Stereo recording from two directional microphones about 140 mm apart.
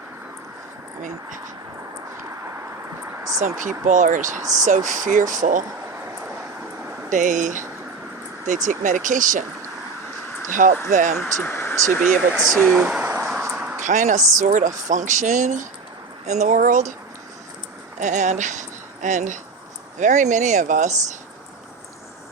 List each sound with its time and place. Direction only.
3.6 s speech: 65° right (ahead or behind)
7.1 s speech: 65° right (ahead or behind)
10.5 s speech: 65° right (ahead or behind)
11.2 s speech: 15° left (ahead or behind)
12.3 s speech: centre (ahead or behind)
12.7 s a sound: 10° right (ahead or behind)
13.8 s speech: 60° right (ahead or behind)
18.0 s speech: 60° right (ahead or behind)